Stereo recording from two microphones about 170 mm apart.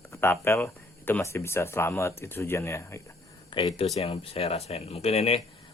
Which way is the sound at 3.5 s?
30° left (ahead or behind).